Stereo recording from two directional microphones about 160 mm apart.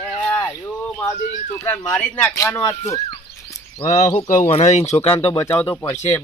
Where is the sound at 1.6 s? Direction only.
15° left (ahead or behind).